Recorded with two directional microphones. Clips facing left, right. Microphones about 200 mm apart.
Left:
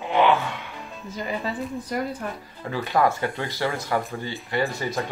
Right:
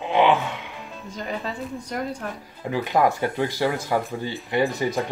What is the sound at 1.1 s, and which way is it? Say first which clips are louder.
Speech: left 2 dB; centre (ahead or behind).